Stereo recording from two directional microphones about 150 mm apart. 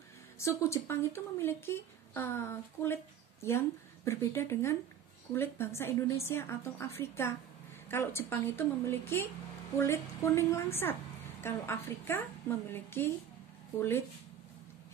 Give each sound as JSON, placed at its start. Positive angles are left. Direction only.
{"t": 0.4, "sound": "speech", "side_deg": 20}